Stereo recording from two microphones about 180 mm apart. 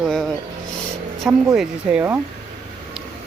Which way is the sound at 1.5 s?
5° right (ahead or behind).